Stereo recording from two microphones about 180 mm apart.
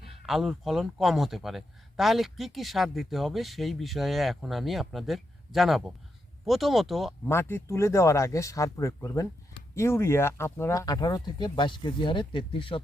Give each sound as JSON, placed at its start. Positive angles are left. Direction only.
{"t": 0.0, "sound": "speech", "side_deg": 0}
{"t": 7.3, "sound": "speech", "side_deg": 15}